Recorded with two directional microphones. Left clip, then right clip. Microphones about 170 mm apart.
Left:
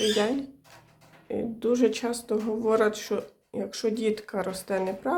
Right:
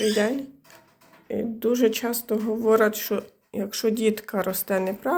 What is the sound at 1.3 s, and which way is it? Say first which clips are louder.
Speech: right 2 dB; 5° right (ahead or behind).